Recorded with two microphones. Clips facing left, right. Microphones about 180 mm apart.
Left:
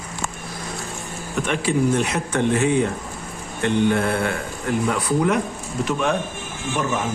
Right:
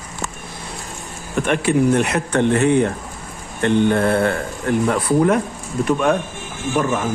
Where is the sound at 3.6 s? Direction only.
50° right (ahead or behind).